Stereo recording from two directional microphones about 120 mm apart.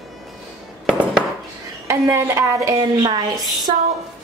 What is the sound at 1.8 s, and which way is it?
A woman's voice, 25° right (ahead or behind).